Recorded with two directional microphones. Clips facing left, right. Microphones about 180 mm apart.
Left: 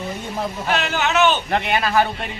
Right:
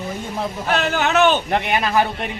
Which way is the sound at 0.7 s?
45° right (ahead or behind).